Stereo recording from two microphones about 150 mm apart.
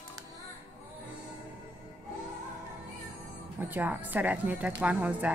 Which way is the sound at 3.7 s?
10° right (ahead or behind).